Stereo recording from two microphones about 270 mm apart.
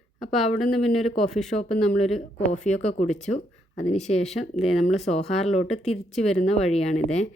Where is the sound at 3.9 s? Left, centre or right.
Left.